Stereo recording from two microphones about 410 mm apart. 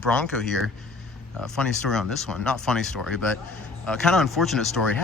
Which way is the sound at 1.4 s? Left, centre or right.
Centre.